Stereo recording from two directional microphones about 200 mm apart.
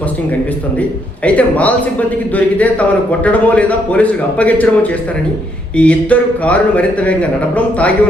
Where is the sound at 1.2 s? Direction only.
5° left (ahead or behind).